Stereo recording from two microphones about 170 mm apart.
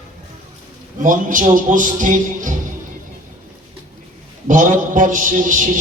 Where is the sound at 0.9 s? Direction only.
50° right (ahead or behind).